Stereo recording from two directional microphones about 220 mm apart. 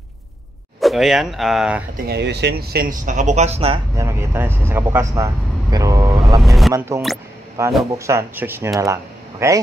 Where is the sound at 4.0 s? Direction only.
10° right (ahead or behind).